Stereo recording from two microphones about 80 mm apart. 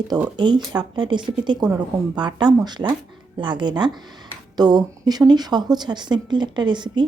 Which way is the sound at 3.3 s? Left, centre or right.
Right.